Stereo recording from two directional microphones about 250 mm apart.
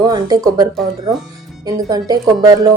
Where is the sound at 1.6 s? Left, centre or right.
Centre.